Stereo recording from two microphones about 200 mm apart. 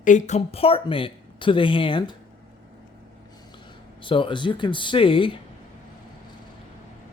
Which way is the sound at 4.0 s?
25° left (ahead or behind).